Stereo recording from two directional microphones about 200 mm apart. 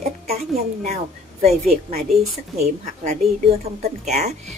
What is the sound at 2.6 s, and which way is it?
A woman's voice, 35° right (ahead or behind).